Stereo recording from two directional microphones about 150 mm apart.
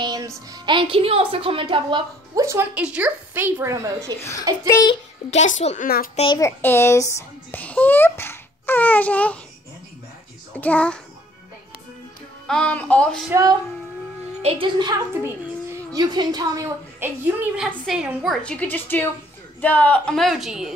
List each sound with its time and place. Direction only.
0.0 s speech: 30° right (ahead or behind)
2.3 s a woman's voice: 20° right (ahead or behind)
4.2 s a child's voice: 20° left (ahead or behind)
5.3 s a child's voice: 45° left (ahead or behind)
6.6 s a child's voice: 15° left (ahead or behind)
10.5 s a woman's voice: 10° left (ahead or behind)
12.4 s a woman's voice: 5° left (ahead or behind)
13.3 s speech: 25° right (ahead or behind)
14.4 s speech: 40° right (ahead or behind)
15.2 s a child's voice: 20° right (ahead or behind); by 20.7 s centre (ahead or behind)